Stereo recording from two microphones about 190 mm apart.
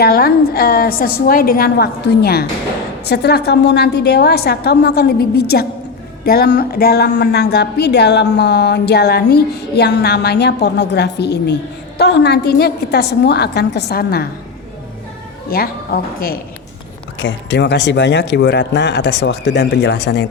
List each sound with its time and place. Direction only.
0.0 s a woman's voice: 50° left (ahead or behind)
15.4 s a woman's voice: 50° left (ahead or behind)
17.2 s a woman's voice: 75° left (ahead or behind)